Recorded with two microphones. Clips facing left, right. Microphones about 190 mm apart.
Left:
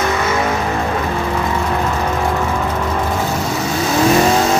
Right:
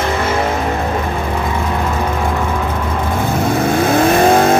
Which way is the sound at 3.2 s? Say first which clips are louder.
Right 4 dB; 55° right (ahead or behind).